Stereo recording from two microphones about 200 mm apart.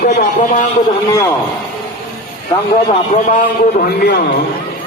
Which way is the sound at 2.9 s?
40° left (ahead or behind).